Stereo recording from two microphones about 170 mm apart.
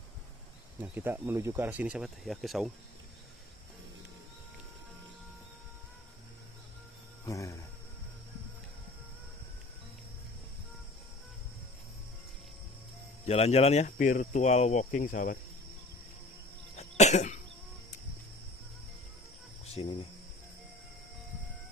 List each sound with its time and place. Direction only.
0.7 s speech: 10° right (ahead or behind)
7.2 s a sound: 20° left (ahead or behind)
13.2 s speech: 40° left (ahead or behind)
16.7 s cough: 40° left (ahead or behind)
19.6 s cricket: 35° left (ahead or behind)